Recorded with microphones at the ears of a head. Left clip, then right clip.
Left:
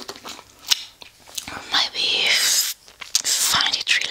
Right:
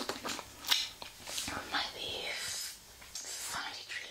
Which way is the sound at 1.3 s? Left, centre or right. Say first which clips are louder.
Left 13 dB; left.